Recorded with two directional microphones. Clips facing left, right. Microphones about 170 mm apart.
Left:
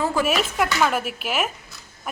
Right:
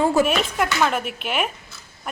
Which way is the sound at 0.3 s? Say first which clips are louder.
Even; 5° left (ahead or behind).